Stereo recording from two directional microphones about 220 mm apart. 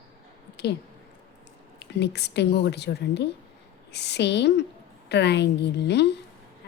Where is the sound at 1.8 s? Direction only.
50° left (ahead or behind).